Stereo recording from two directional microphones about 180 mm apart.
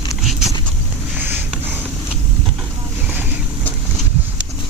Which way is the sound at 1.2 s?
10° right (ahead or behind).